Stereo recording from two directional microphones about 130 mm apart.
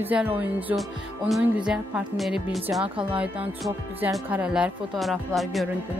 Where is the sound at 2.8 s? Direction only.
40° right (ahead or behind).